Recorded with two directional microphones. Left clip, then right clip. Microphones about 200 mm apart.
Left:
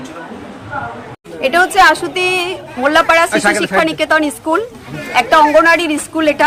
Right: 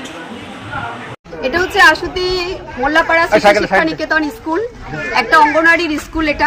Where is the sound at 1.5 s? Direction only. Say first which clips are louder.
Left 1 dB; 35° left (ahead or behind).